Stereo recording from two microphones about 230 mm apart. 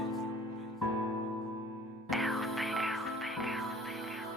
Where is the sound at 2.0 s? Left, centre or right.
Centre.